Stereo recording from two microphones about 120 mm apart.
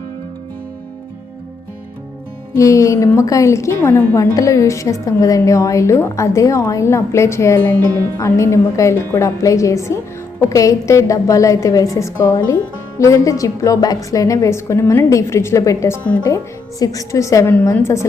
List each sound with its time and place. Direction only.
2.6 s a woman's voice: 25° left (ahead or behind)